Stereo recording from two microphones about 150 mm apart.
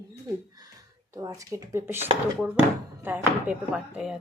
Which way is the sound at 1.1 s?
25° right (ahead or behind).